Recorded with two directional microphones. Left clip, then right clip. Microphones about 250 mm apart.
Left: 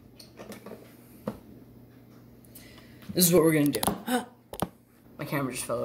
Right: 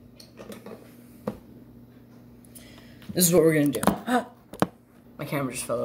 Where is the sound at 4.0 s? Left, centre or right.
Left.